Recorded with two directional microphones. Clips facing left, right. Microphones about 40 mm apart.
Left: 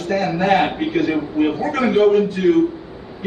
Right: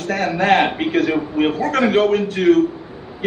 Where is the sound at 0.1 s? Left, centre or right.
Right.